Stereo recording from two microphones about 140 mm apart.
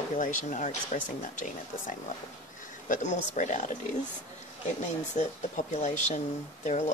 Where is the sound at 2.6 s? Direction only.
65° left (ahead or behind).